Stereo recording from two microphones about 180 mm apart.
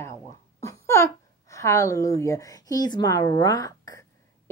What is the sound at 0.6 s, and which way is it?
A woman's voice, 15° left (ahead or behind).